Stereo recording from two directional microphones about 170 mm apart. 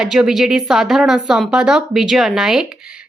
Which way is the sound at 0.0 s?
5° right (ahead or behind).